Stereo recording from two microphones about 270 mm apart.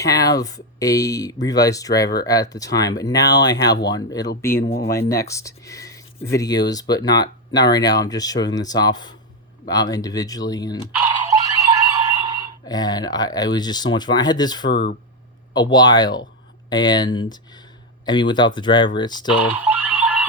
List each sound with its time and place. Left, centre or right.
0.0 s speech: centre
4.6 s speech: left
4.9 s speech: centre
10.9 s a sound: centre
12.6 s speech: centre
14.7 s speech: left
15.5 s speech: centre
19.4 s a sound: centre